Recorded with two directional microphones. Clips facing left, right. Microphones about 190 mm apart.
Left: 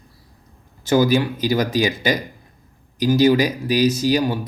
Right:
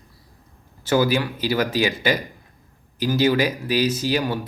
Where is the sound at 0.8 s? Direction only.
15° left (ahead or behind).